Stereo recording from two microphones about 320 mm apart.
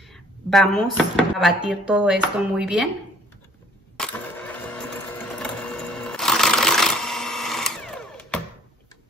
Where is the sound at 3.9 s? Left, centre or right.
Centre.